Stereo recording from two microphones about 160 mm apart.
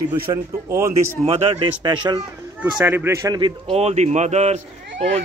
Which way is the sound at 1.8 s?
30° right (ahead or behind).